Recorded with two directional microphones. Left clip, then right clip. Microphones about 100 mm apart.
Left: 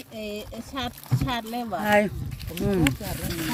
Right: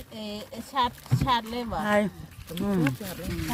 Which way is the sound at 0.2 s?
20° right (ahead or behind).